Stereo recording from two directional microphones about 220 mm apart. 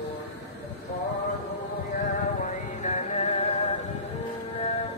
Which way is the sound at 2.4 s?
35° left (ahead or behind).